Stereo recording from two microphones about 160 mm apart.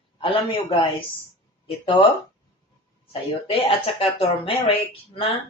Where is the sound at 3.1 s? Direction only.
35° left (ahead or behind).